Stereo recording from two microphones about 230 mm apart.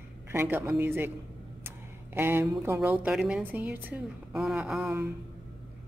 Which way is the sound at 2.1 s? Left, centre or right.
Centre.